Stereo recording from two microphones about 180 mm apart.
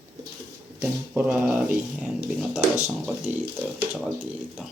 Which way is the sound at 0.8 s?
10° right (ahead or behind).